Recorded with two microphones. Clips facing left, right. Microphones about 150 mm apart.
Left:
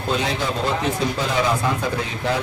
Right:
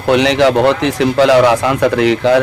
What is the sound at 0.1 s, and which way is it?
Speech, 75° right (ahead or behind).